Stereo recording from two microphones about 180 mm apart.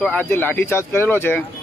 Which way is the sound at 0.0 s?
10° left (ahead or behind).